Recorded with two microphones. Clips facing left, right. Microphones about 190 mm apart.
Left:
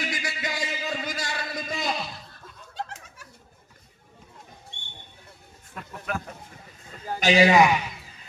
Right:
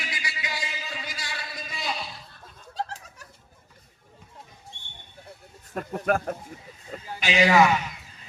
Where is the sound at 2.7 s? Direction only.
35° right (ahead or behind).